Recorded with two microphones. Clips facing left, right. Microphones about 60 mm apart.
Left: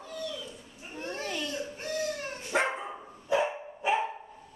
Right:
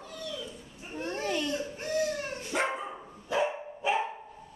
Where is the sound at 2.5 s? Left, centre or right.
Left.